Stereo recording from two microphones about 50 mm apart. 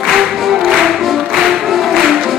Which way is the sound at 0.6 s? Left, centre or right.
Centre.